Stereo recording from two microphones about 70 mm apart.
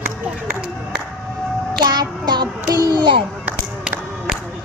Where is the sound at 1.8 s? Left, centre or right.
Right.